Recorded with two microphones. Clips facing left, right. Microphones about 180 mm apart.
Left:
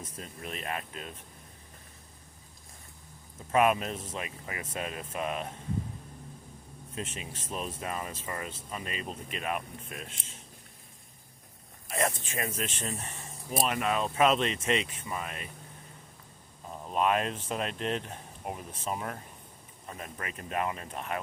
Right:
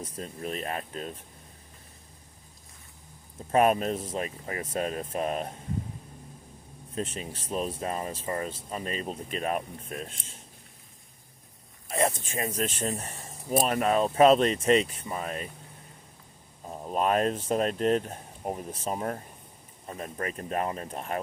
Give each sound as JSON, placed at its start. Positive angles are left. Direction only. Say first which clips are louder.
{"t": 0.0, "sound": "speech", "louder": "right 6 dB", "side_deg": -40}
{"t": 3.5, "sound": "speech", "louder": "right 3 dB", "side_deg": -40}
{"t": 6.9, "sound": "speech", "louder": "right 5 dB", "side_deg": -35}
{"t": 11.9, "sound": "speech", "louder": "right 3 dB", "side_deg": -30}
{"t": 16.6, "sound": "speech", "louder": "right 1 dB", "side_deg": -35}